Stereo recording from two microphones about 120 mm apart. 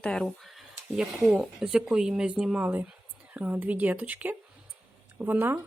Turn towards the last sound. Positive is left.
turn(degrees=-15)  # may be behind; listen again after turning